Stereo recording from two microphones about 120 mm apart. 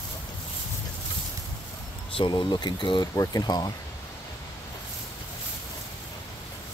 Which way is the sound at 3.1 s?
30° left (ahead or behind).